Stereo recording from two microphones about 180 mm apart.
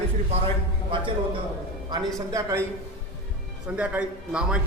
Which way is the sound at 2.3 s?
15° right (ahead or behind).